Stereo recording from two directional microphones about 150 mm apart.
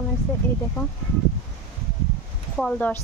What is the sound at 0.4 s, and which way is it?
Speech, 15° left (ahead or behind).